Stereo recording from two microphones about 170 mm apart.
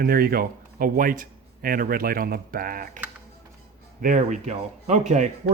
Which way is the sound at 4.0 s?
50° right (ahead or behind).